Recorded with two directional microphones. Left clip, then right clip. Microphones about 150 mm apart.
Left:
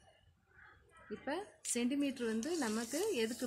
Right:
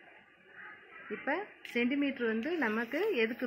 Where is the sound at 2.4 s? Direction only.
50° left (ahead or behind).